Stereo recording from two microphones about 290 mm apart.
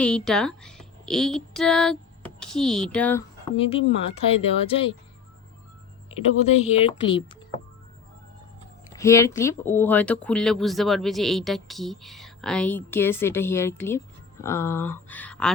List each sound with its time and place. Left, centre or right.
0.0 s a woman's voice: centre
3.5 s speech: centre
6.4 s speech: left
9.0 s speech: centre